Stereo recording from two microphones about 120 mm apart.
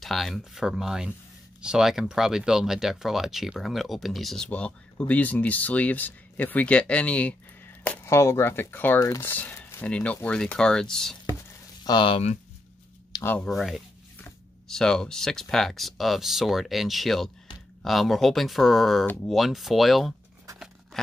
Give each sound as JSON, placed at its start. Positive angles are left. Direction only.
{"t": 0.0, "sound": "speech", "side_deg": 0}
{"t": 4.5, "sound": "speech", "side_deg": 10}
{"t": 11.8, "sound": "speech", "side_deg": 40}
{"t": 13.4, "sound": "speech", "side_deg": 0}
{"t": 20.5, "sound": "scissors", "side_deg": -5}